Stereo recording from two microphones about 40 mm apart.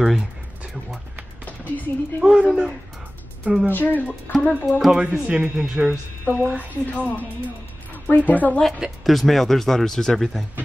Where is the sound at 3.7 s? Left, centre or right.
Left.